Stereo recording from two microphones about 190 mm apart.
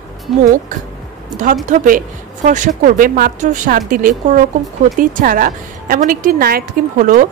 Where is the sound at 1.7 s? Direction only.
45° right (ahead or behind).